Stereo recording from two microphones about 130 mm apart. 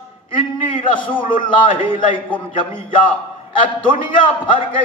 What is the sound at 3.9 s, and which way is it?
Speech, 40° left (ahead or behind).